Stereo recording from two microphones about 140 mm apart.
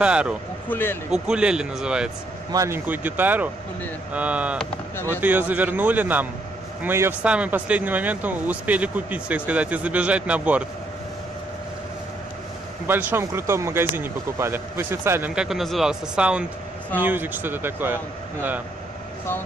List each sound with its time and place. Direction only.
0.0 s speech: 5° right (ahead or behind)
0.7 s speech: 15° left (ahead or behind)
1.1 s speech: 5° right (ahead or behind)
2.5 s speech: 20° right (ahead or behind)
12.8 s speech: 15° right (ahead or behind)
15.3 s speech: 5° right (ahead or behind)